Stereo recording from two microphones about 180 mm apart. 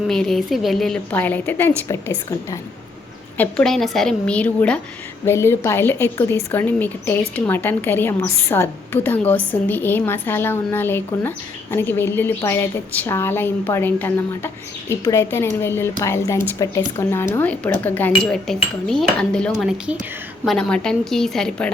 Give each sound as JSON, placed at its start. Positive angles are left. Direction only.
{"t": 0.1, "sound": "a woman's voice", "side_deg": 0}